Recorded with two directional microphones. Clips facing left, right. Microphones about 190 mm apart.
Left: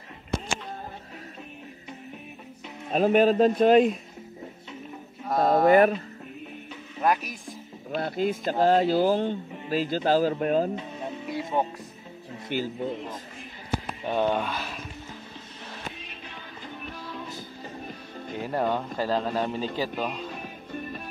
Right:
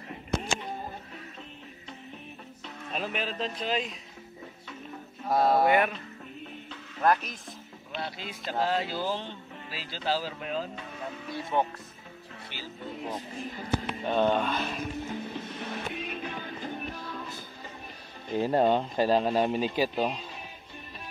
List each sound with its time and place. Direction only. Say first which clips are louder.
2.9 s speech: left 14 dB; 45° left (ahead or behind)
5.2 s a sound: left 2 dB; 5° right (ahead or behind)
5.7 s speech: left 7 dB; 40° left (ahead or behind)
7.0 s speech: even; 10° left (ahead or behind)
7.9 s speech: left 11 dB; 50° left (ahead or behind)
10.8 s music: left 4 dB; 20° left (ahead or behind)
12.5 s speech: left 16 dB; 50° left (ahead or behind)
14.0 s speech: even; 10° left (ahead or behind)
15.3 s music: right 7 dB; 60° right (ahead or behind)
18.4 s speech: right 3 dB; 25° right (ahead or behind)